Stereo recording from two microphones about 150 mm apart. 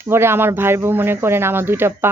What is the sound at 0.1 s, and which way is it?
Speech, 15° right (ahead or behind).